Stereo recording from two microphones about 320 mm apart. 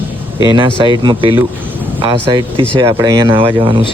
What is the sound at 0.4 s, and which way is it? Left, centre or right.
Speech, centre.